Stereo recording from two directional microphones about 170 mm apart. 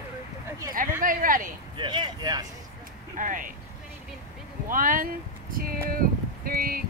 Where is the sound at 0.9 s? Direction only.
55° right (ahead or behind).